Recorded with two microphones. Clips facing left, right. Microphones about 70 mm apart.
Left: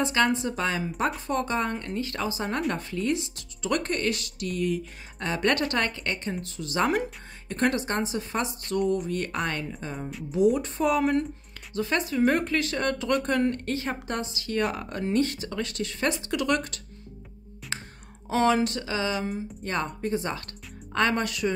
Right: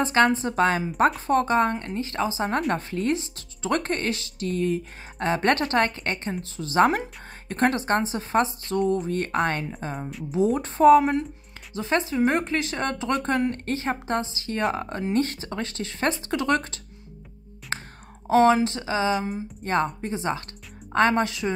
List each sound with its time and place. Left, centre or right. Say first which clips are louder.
0.0 s speech: right 4 dB; right
2.7 s speech: right 3 dB; right
17.7 s whispering: right 4 dB; right
18.2 s speech: right 5 dB; right
19.1 s speech: right 2 dB; centre
19.6 s speech: right 6 dB; right